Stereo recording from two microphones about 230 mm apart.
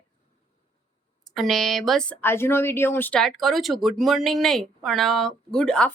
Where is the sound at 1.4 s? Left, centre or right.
Centre.